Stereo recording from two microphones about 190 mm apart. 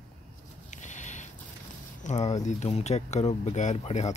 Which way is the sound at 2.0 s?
35° left (ahead or behind).